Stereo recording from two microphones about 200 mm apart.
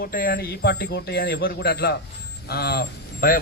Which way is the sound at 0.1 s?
45° left (ahead or behind).